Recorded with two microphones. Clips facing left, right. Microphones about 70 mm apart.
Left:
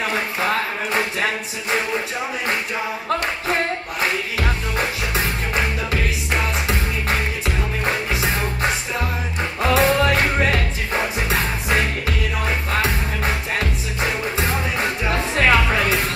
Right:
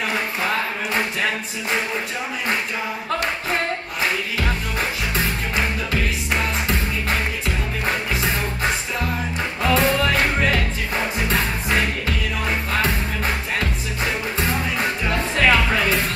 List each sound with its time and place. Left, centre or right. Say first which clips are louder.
4.4 s music: left 1 dB; centre
7.8 s music: left 1 dB; centre
9.6 s music: left 2 dB; centre
12.4 s music: even; centre
15.4 s music: left 1 dB; centre